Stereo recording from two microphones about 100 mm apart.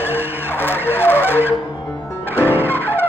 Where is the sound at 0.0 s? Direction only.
20° left (ahead or behind).